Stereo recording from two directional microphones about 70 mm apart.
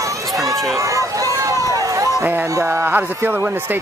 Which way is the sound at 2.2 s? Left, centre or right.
Right.